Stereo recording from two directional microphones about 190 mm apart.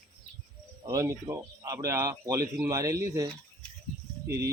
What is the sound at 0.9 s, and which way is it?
Speech, 15° right (ahead or behind).